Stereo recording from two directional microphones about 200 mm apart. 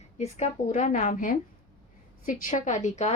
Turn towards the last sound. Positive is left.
turn(degrees=35)  # may be behind; listen again after turning